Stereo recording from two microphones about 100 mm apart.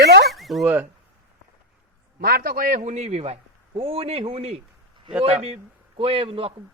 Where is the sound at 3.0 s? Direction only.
90° right.